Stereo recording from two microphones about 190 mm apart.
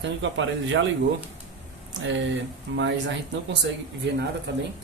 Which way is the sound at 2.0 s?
75° right (ahead or behind).